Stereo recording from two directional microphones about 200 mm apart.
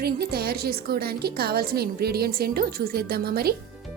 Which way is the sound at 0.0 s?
50° right (ahead or behind).